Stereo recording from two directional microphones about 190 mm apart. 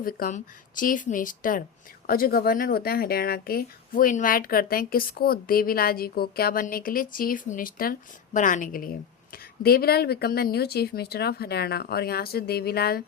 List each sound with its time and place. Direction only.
0.0 s speech: 45° left (ahead or behind)